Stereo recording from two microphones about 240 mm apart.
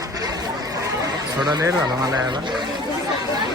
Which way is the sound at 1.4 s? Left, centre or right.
Centre.